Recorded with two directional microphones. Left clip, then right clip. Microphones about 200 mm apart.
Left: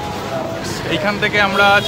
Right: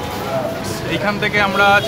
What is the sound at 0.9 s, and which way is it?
Speech, 5° left (ahead or behind).